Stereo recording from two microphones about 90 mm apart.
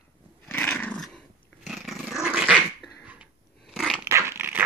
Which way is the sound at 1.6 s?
Centre (ahead or behind).